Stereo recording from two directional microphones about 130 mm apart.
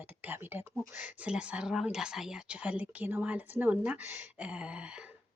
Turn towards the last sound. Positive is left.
turn(degrees=-10)  # may be behind; listen again after turning